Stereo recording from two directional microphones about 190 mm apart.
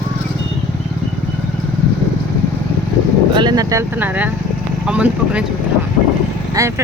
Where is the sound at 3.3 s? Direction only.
20° right (ahead or behind); by 5.4 s 5° right (ahead or behind).